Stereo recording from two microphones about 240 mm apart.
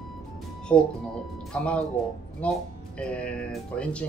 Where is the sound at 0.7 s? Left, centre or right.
Centre.